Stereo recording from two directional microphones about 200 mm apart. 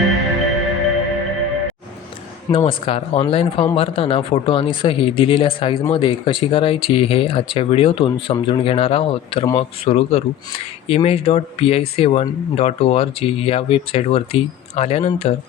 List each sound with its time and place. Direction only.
0.1 s music: centre (ahead or behind)
2.6 s speech: 25° left (ahead or behind)